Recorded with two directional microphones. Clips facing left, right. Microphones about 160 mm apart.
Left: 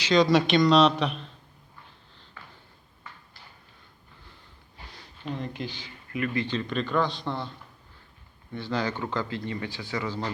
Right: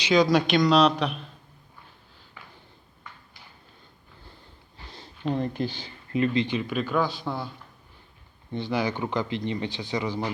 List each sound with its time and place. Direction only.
0.1 s speech: centre (ahead or behind)
4.9 s sniff: 25° right (ahead or behind)
5.2 s speech: 40° right (ahead or behind); by 7.5 s 5° right (ahead or behind)
8.5 s speech: 15° right (ahead or behind)